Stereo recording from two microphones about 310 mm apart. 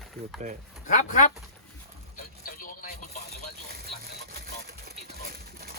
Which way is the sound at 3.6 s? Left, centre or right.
Right.